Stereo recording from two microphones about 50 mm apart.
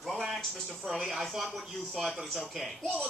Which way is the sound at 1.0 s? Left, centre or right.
Centre.